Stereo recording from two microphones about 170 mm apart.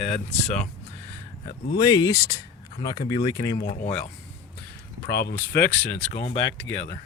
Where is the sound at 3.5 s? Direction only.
55° left (ahead or behind).